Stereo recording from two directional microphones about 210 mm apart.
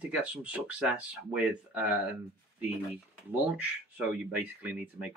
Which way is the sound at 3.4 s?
5° right (ahead or behind).